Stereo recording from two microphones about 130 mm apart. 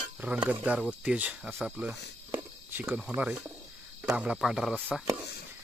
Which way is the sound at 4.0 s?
5° right (ahead or behind).